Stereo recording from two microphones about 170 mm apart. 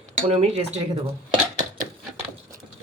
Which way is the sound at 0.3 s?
35° right (ahead or behind).